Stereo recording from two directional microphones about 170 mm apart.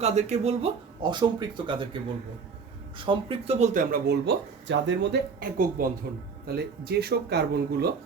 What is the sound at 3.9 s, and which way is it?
Speech, 80° right.